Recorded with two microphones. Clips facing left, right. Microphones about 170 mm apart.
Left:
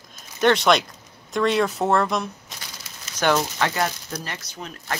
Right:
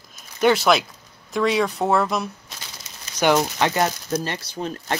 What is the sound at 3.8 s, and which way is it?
Speech, 25° right (ahead or behind).